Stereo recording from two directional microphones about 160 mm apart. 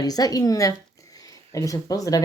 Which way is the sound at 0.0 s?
25° left (ahead or behind).